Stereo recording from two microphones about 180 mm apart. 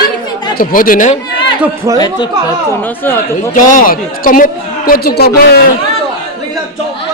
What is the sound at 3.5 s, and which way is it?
A woman's voice, 50° left (ahead or behind).